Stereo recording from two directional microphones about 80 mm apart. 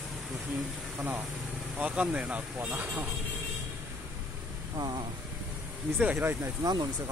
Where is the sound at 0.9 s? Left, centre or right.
Right.